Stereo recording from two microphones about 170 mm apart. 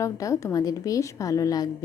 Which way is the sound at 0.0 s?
20° left (ahead or behind).